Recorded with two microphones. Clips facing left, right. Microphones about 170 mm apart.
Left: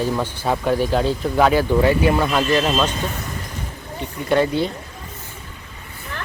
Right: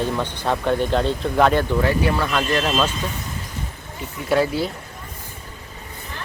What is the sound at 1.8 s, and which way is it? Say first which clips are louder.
Speech: left 4 dB; 15° left (ahead or behind).